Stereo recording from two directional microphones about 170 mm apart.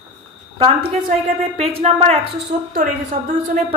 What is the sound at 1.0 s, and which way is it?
A woman's voice, 40° right (ahead or behind).